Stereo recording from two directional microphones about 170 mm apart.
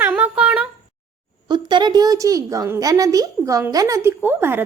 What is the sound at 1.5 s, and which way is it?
A woman's voice, 25° right (ahead or behind).